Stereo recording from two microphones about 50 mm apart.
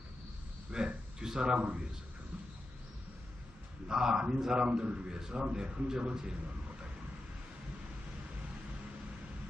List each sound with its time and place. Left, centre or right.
0.7 s speech: centre
3.8 s a man's voice: centre